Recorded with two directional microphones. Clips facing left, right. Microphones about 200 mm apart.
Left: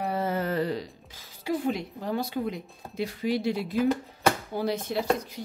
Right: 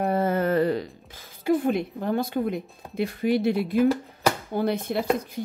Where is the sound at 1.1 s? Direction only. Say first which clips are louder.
Right 7 dB; 55° right (ahead or behind).